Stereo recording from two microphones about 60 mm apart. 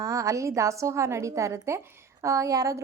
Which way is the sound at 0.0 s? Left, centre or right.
Right.